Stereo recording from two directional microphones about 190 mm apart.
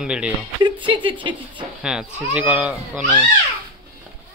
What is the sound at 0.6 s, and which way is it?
Speech, 25° right (ahead or behind).